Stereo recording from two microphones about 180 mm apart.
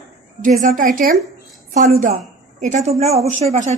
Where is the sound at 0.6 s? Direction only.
45° right (ahead or behind).